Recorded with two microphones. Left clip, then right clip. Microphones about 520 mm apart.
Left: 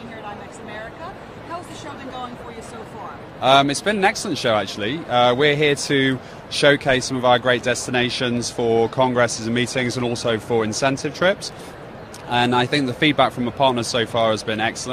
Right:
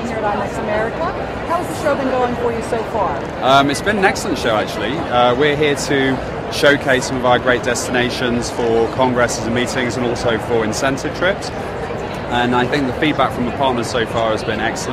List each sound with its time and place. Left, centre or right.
3.4 s speech: left
12.4 s speech: left